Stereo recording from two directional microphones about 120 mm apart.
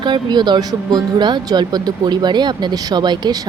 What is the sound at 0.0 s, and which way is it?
Speech, 40° right (ahead or behind).